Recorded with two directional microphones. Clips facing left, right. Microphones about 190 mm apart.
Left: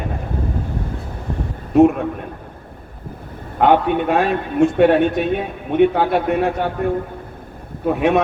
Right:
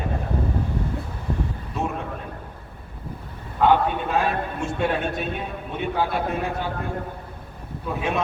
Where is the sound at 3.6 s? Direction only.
60° left (ahead or behind).